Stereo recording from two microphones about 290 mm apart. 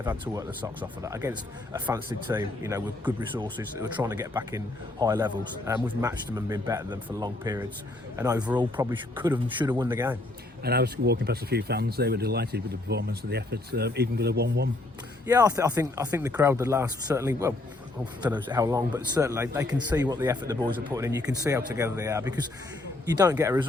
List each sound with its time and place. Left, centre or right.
0.0 s speech: centre
10.6 s speech: right
15.3 s speech: centre